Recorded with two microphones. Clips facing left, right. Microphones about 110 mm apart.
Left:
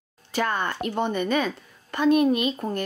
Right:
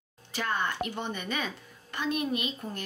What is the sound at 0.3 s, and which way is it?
A woman's voice, 55° left (ahead or behind).